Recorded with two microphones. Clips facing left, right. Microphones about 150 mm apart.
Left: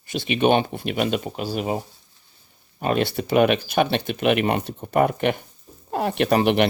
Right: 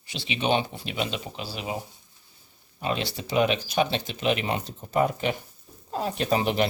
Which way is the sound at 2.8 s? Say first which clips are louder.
Left 7 dB; 55° left (ahead or behind).